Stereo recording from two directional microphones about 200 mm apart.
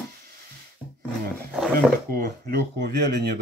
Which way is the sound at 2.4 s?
55° right (ahead or behind).